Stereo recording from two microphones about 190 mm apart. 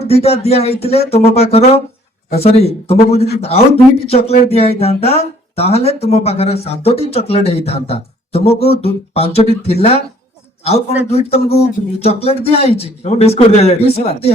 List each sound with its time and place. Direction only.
0.0 s a man's voice: 30° left (ahead or behind)